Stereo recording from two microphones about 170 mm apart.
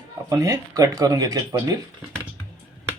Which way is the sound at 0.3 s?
20° right (ahead or behind).